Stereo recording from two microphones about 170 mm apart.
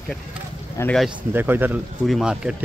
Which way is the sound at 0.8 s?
15° left (ahead or behind).